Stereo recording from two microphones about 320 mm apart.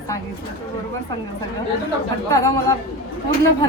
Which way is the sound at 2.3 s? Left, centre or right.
Centre.